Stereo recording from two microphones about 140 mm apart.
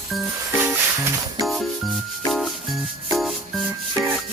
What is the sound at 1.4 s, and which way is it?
Music, centre (ahead or behind).